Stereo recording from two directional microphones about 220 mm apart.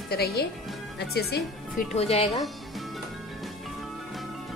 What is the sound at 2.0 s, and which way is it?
Speech, 30° left (ahead or behind).